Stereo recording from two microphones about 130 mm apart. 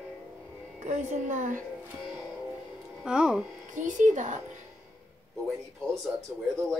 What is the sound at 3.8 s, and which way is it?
Child singing, 75° right (ahead or behind).